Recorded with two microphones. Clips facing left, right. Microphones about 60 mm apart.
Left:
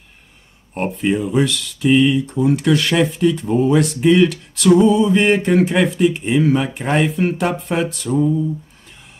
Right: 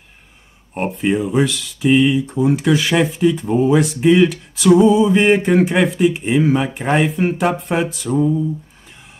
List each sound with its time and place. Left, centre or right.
0.7 s speech: centre